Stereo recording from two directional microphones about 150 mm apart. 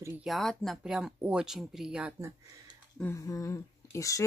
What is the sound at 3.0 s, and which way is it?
Speech, 20° left (ahead or behind).